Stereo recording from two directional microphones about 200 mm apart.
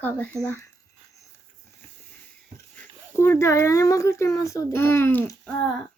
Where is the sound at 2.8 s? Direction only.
10° left (ahead or behind).